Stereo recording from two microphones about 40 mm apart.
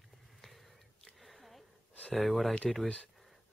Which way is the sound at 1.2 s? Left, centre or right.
Centre.